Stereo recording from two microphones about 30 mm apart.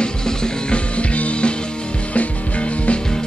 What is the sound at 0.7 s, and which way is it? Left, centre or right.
Music, left.